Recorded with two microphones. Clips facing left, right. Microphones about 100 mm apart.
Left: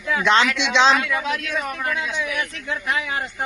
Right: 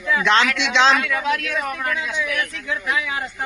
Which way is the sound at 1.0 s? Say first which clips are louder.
Right 2 dB; 20° left (ahead or behind).